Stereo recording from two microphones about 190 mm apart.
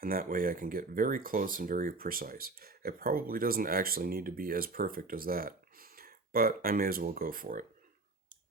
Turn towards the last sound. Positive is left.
turn(degrees=-45)  # may be behind; listen again after turning